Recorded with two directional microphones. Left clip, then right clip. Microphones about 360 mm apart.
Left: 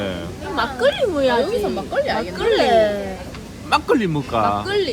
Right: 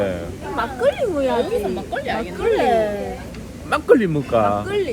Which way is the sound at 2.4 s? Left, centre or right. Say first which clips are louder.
Left 2 dB; left.